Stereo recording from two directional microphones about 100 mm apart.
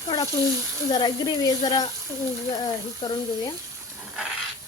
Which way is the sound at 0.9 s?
40° left (ahead or behind).